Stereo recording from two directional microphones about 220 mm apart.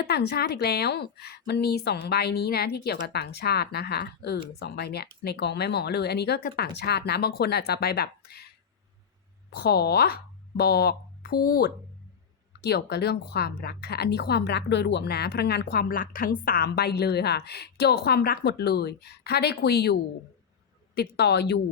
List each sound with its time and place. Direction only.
0.0 s a woman's voice: 45° left (ahead or behind)
9.6 s a woman's voice: 45° left (ahead or behind)